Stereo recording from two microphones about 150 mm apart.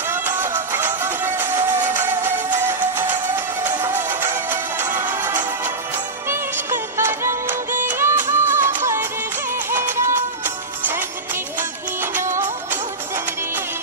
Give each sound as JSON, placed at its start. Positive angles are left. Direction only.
{"t": 0.1, "sound": "music", "side_deg": -15}
{"t": 3.8, "sound": "music", "side_deg": -15}